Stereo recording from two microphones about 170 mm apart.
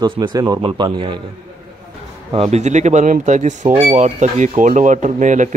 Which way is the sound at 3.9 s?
45° right (ahead or behind).